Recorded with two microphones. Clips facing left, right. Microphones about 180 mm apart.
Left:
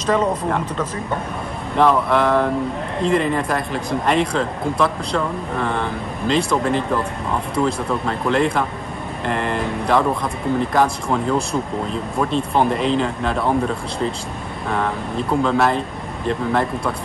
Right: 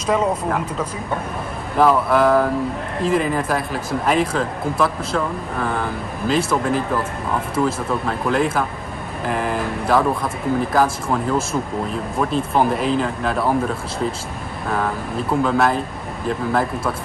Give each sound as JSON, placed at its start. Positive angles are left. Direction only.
{"t": 0.0, "sound": "speech", "side_deg": -10}